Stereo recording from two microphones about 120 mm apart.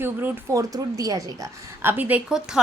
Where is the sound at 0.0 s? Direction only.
20° right (ahead or behind).